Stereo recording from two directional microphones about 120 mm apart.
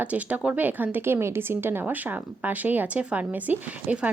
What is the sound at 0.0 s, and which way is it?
A woman's voice, 10° right (ahead or behind).